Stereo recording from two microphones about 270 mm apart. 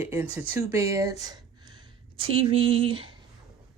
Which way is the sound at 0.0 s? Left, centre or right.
Centre.